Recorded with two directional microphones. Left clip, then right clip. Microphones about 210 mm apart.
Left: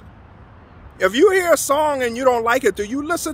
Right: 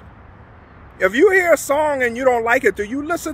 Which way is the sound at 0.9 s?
15° left (ahead or behind).